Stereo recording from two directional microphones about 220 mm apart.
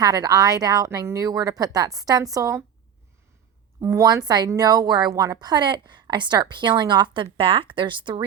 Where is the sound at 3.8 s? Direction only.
15° right (ahead or behind).